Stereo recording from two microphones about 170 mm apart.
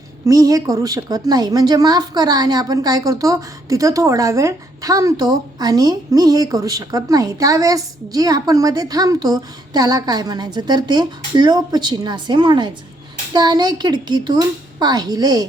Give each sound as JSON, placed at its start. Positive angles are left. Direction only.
{"t": 0.3, "sound": "a woman's voice", "side_deg": -20}